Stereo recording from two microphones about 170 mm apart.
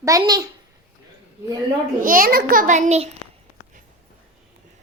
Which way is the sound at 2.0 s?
55° right (ahead or behind).